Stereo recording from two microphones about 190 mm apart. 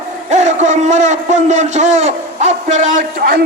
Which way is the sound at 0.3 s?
40° right (ahead or behind).